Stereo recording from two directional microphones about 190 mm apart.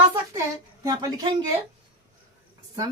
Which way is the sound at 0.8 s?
20° right (ahead or behind).